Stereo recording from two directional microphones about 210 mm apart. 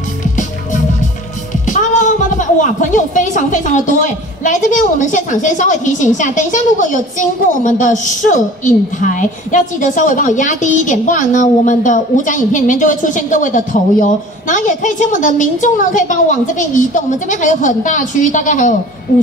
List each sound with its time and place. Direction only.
1.7 s a woman's voice: 35° left (ahead or behind)